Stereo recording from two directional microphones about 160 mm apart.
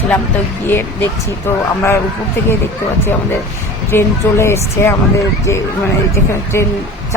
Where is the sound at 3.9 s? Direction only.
15° left (ahead or behind).